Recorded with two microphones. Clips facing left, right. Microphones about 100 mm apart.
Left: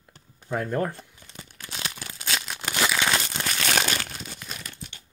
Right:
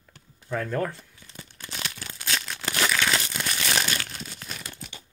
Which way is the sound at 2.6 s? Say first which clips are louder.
Left 1 dB; 10° left (ahead or behind).